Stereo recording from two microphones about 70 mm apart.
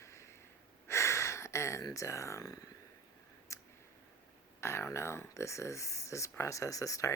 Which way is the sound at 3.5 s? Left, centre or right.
Left.